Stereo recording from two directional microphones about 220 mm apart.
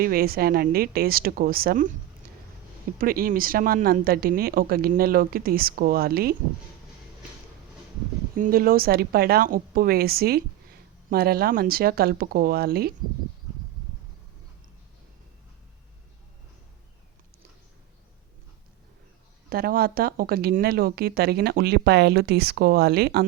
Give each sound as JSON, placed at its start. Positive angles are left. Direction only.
{"t": 0.0, "sound": "speech", "side_deg": -40}
{"t": 2.2, "sound": "a sound", "side_deg": -40}
{"t": 3.0, "sound": "speech", "side_deg": -40}
{"t": 8.4, "sound": "speech", "side_deg": -40}
{"t": 19.5, "sound": "speech", "side_deg": -45}